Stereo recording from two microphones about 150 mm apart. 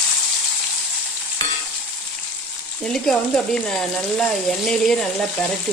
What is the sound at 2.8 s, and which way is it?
Speech, 5° left (ahead or behind).